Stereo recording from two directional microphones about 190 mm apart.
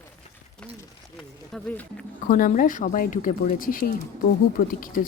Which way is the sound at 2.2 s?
45° left (ahead or behind).